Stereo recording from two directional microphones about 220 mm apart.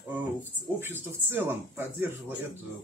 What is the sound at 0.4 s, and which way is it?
Speech, 10° right (ahead or behind).